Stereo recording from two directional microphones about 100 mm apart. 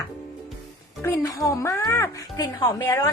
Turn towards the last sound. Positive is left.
turn(degrees=30)  # may be behind; listen again after turning